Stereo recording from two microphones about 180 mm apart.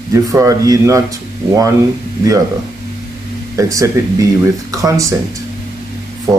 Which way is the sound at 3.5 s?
20° right (ahead or behind).